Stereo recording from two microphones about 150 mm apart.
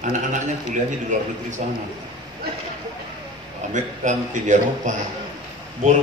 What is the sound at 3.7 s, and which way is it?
A man's voice, 55° right (ahead or behind).